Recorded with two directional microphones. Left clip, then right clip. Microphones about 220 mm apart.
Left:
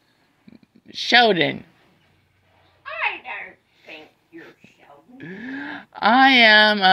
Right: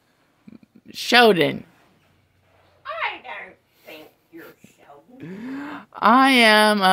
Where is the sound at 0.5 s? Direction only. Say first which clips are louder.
Even; 25° right (ahead or behind).